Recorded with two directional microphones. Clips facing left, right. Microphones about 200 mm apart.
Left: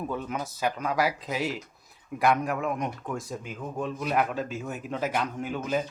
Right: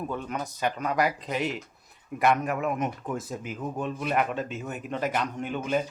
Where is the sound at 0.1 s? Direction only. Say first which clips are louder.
Even; 5° left (ahead or behind).